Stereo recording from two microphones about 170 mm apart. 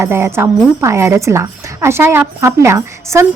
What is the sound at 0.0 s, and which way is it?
A woman's voice, 15° right (ahead or behind).